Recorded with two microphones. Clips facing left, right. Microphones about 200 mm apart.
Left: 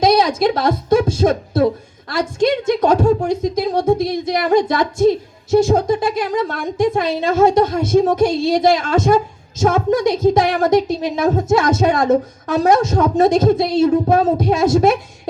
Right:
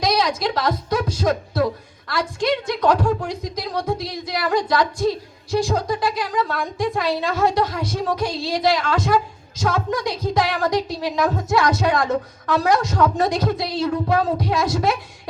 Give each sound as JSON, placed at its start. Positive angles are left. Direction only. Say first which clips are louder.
{"t": 0.3, "sound": "a woman's voice", "louder": "left 7 dB", "side_deg": 50}
{"t": 0.9, "sound": "a woman's voice", "louder": "left 7 dB", "side_deg": 25}